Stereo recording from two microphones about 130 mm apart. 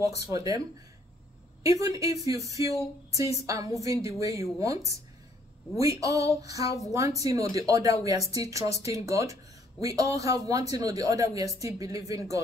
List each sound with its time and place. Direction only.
0.0 s speech: 25° right (ahead or behind)
1.6 s speech: 25° right (ahead or behind)